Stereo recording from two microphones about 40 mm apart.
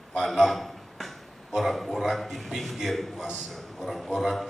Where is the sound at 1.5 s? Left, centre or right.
Centre.